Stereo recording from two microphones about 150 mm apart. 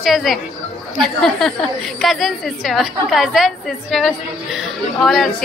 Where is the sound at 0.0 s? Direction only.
Centre (ahead or behind).